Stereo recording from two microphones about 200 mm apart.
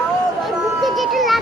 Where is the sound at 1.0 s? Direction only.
Centre (ahead or behind).